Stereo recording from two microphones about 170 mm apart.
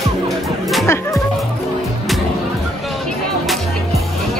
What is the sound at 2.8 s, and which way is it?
Music, centre (ahead or behind).